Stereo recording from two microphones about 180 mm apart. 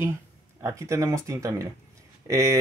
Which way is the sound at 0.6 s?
15° right (ahead or behind).